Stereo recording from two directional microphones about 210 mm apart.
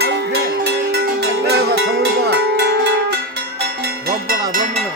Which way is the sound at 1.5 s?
50° right (ahead or behind).